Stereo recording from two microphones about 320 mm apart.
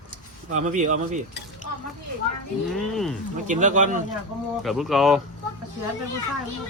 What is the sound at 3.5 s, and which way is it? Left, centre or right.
Speech, right.